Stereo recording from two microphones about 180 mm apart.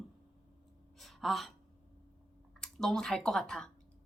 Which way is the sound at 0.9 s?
Centre (ahead or behind).